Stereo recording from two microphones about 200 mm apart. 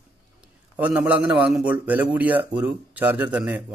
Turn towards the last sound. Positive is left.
turn(degrees=-5)  # may be behind; listen again after turning